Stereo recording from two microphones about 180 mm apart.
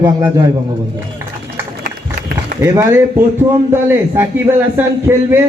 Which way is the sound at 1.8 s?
55° right (ahead or behind).